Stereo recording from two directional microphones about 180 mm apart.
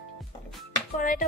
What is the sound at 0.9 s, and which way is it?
Speech, 45° left (ahead or behind).